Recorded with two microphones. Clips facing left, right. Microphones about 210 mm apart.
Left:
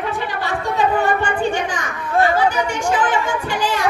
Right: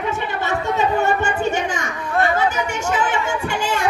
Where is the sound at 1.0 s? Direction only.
25° right (ahead or behind).